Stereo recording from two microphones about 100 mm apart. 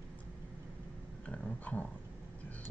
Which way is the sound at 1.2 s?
15° left (ahead or behind).